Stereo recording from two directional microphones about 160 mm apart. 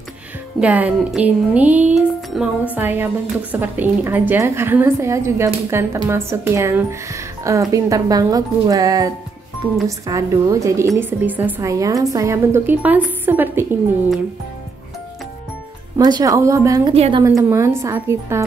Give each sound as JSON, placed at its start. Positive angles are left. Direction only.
{"t": 0.6, "sound": "a woman's voice", "side_deg": -10}
{"t": 16.0, "sound": "a woman's voice", "side_deg": -25}
{"t": 16.9, "sound": "a woman's voice", "side_deg": -40}
{"t": 17.4, "sound": "a woman's voice", "side_deg": -15}